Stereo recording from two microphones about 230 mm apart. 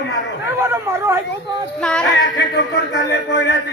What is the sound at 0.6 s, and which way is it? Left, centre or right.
Speech, centre.